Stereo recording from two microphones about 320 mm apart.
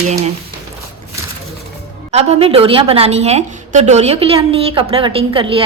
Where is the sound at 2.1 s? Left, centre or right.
Centre.